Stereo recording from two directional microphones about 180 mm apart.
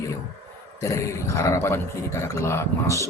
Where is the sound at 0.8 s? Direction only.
20° left (ahead or behind).